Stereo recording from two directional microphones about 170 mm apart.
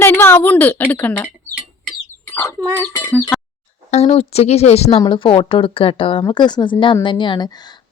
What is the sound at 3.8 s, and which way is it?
A woman's voice, 40° left (ahead or behind).